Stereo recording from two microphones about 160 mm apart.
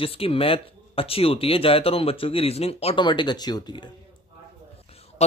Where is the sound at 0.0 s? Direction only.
35° left (ahead or behind).